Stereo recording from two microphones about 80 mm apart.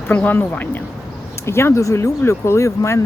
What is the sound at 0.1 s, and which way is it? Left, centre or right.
A woman's voice, left.